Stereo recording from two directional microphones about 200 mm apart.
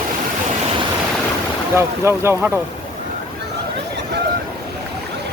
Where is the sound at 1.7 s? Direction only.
15° right (ahead or behind).